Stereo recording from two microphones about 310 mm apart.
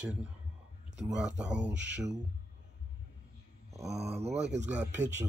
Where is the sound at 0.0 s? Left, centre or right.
Centre.